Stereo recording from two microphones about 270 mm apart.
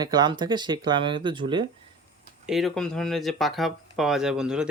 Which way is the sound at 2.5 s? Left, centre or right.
Centre.